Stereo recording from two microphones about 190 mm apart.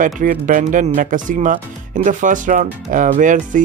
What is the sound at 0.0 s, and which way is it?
Speech, 45° right (ahead or behind).